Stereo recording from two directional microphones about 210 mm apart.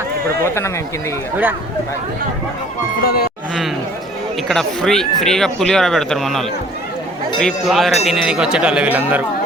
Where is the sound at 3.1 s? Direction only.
45° left (ahead or behind).